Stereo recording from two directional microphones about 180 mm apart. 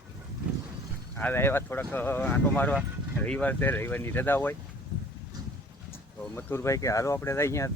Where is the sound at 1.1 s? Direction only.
10° left (ahead or behind).